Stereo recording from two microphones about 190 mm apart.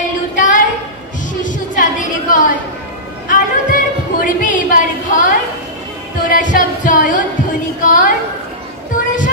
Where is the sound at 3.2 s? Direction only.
45° left (ahead or behind).